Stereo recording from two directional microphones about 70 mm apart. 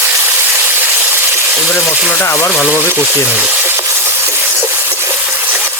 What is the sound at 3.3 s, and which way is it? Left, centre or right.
Frying, centre.